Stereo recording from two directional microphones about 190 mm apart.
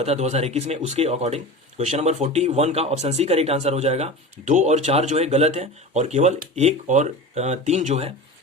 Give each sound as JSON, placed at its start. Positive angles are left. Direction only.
{"t": 0.0, "sound": "speech", "side_deg": -35}